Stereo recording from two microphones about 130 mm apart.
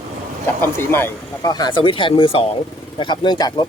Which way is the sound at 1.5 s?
35° left (ahead or behind).